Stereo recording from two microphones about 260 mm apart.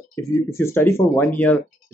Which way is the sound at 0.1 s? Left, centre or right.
Centre.